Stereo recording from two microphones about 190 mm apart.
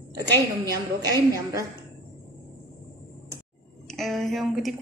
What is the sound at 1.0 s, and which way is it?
Speech, 20° right (ahead or behind).